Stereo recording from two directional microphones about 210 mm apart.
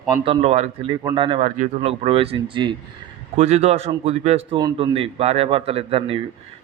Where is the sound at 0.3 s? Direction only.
30° right (ahead or behind).